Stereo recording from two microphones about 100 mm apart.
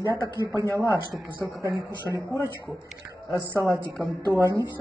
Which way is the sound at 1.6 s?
30° right (ahead or behind).